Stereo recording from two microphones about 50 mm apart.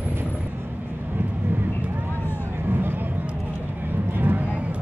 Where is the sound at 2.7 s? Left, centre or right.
Right.